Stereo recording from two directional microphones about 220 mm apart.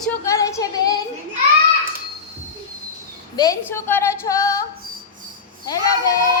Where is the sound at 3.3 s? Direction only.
15° left (ahead or behind).